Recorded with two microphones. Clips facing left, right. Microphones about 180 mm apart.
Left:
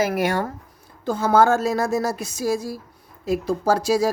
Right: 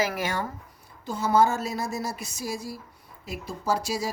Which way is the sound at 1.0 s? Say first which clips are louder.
Left 5 dB; 90° left.